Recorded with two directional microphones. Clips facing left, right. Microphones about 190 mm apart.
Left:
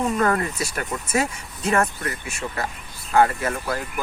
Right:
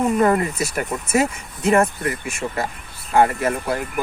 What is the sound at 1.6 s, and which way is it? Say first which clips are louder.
Speech: right 5 dB; 20° right (ahead or behind).